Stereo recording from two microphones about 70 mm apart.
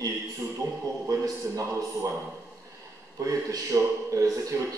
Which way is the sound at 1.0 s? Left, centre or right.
Right.